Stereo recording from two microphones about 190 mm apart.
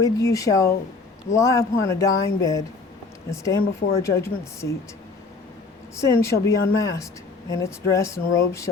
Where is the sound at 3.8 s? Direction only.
45° left (ahead or behind).